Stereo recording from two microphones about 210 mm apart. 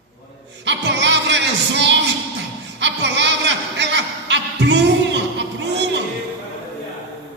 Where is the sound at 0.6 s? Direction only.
55° right (ahead or behind).